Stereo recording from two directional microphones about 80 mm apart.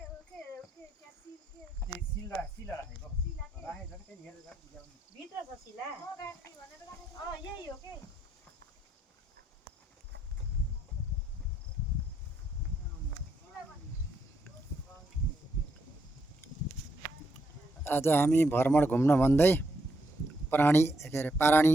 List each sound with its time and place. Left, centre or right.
17.8 s speech: left